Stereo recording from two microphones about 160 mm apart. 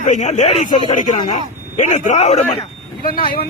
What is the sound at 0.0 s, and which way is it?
Speech, 50° left (ahead or behind).